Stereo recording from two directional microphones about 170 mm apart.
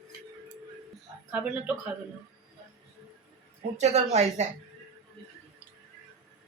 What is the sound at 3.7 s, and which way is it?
Speech, 40° right (ahead or behind).